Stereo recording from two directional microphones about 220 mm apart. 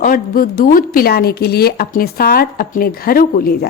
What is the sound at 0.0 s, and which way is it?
Speech, 40° left (ahead or behind).